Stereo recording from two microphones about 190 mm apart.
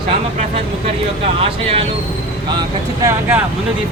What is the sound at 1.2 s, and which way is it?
Speech, 30° right (ahead or behind).